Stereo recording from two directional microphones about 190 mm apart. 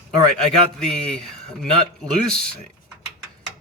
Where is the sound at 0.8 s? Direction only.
5° left (ahead or behind).